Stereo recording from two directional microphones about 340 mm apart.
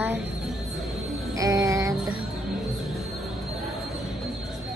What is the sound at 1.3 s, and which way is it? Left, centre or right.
Music, centre.